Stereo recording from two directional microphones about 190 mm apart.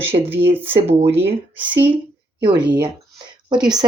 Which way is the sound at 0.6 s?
30° right (ahead or behind).